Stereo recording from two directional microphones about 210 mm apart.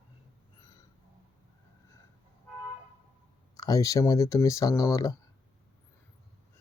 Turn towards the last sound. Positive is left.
turn(degrees=15)  # may be behind; listen again after turning